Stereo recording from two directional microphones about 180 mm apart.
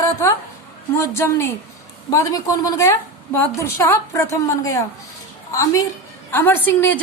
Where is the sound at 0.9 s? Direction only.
15° left (ahead or behind).